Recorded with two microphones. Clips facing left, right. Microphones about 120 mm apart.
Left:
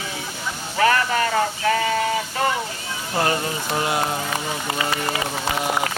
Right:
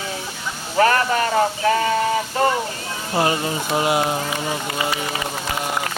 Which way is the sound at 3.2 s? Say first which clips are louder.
Right 2 dB; 20° right (ahead or behind).